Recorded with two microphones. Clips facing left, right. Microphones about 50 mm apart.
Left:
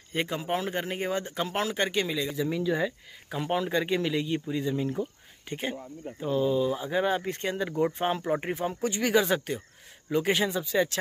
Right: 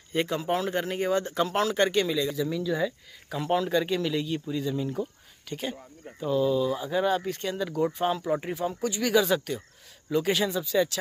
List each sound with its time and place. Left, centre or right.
0.1 s speech: centre